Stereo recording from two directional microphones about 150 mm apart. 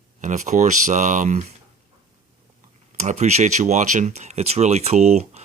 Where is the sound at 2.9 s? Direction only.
50° right (ahead or behind).